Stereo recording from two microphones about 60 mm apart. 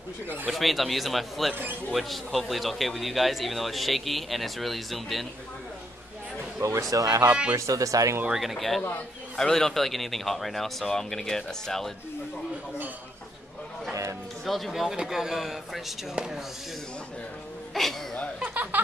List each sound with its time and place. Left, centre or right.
0.5 s speech: centre
6.6 s speech: right
7.2 s speech: centre
7.5 s speech: right
8.3 s speech: centre
14.4 s speech: centre
17.8 s speech: centre
18.4 s a sound: right